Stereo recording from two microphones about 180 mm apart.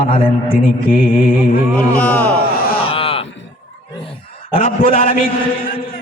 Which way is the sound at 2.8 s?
30° left (ahead or behind).